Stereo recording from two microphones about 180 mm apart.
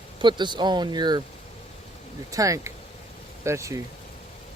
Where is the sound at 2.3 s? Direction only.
20° right (ahead or behind).